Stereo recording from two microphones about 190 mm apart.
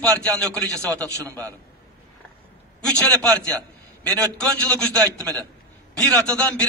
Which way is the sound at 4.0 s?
5° left (ahead or behind).